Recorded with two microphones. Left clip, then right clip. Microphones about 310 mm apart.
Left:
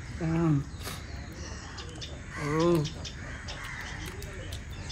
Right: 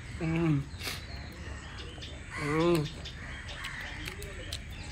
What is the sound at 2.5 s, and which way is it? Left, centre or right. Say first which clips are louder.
Speech: left 1 dB; centre.